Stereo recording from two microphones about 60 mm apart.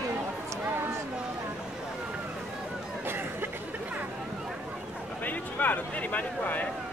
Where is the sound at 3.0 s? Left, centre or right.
Right.